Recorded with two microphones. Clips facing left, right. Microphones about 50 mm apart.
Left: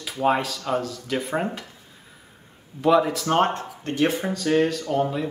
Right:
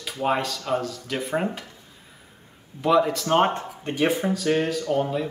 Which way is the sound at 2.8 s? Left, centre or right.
Centre.